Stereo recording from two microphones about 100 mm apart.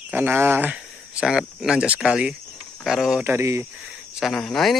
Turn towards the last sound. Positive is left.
turn(degrees=5)  # may be behind; listen again after turning